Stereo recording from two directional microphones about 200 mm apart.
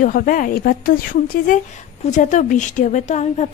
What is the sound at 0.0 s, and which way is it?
Speech, 45° left (ahead or behind).